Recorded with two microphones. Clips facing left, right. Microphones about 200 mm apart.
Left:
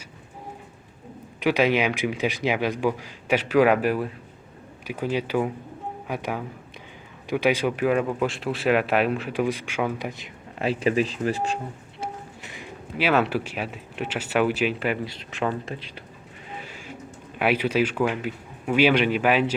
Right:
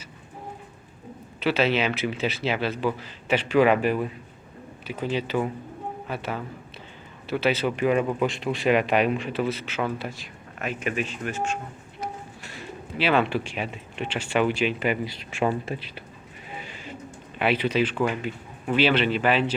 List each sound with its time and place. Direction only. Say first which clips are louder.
1.4 s a man's voice: left 2 dB; 15° left (ahead or behind)
9.3 s a man's voice: left 2 dB; 15° left (ahead or behind)
10.6 s speech: left 6 dB; 30° left (ahead or behind)
12.4 s a sound: right 1 dB; 15° left (ahead or behind)
13.3 s speech: left 1 dB; 5° left (ahead or behind); by 15.8 s 10° right (ahead or behind)
16.9 s speech: even; 10° left (ahead or behind)